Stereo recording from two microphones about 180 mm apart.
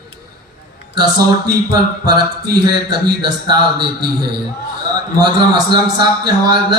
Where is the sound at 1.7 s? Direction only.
25° right (ahead or behind).